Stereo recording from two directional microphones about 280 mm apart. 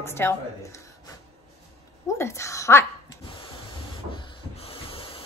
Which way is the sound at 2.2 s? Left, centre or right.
Centre.